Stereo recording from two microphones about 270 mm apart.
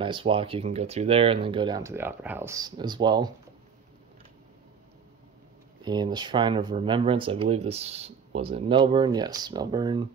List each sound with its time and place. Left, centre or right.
0.0 s speech: centre
5.9 s speech: centre